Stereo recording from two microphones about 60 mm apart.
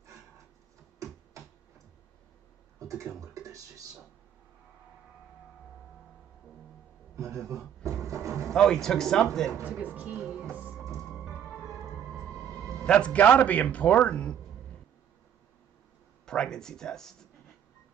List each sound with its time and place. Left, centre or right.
3.2 s speech: right
7.2 s a man's voice: right
7.8 s a sound: right
8.5 s speech: centre
9.6 s speech: right
10.1 s music: centre
12.7 s speech: centre
16.3 s speech: centre